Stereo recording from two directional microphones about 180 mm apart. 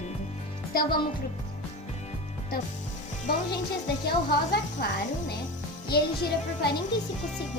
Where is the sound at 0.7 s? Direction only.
55° left (ahead or behind).